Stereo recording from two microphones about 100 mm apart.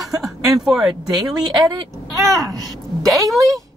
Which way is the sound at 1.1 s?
40° right (ahead or behind).